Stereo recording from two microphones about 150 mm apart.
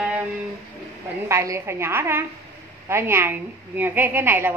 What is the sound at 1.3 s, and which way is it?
A woman's voice, 20° right (ahead or behind).